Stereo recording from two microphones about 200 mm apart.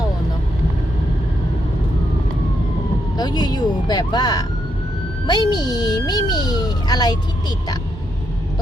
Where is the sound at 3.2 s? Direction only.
20° left (ahead or behind).